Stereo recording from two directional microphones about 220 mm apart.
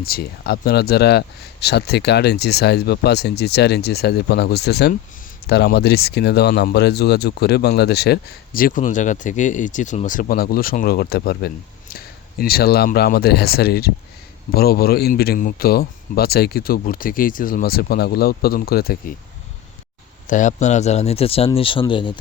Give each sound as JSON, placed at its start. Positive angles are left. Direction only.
{"t": 0.0, "sound": "speech", "side_deg": 45}
{"t": 20.2, "sound": "speech", "side_deg": 35}